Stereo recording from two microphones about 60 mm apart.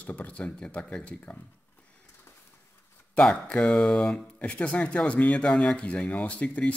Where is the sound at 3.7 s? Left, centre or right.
Centre.